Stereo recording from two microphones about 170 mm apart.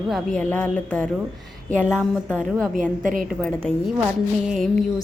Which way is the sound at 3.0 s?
55° right (ahead or behind).